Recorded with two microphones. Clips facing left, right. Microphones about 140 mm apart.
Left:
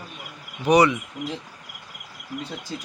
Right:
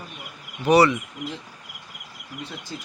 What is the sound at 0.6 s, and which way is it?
Speech, 15° left (ahead or behind).